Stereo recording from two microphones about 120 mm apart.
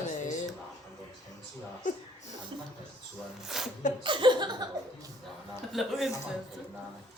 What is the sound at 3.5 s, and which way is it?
Speech, 5° right (ahead or behind).